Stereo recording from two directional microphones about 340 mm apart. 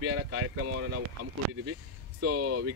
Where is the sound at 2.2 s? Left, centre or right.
Right.